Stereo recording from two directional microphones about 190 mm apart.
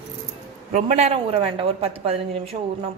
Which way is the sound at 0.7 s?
35° right (ahead or behind).